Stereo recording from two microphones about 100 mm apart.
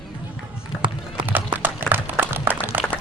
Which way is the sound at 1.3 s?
20° right (ahead or behind).